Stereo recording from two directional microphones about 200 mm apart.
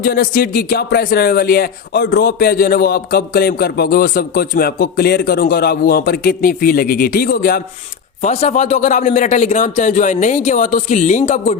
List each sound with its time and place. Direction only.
0.0 s speech: 45° left (ahead or behind)
8.2 s a man's voice: 35° left (ahead or behind)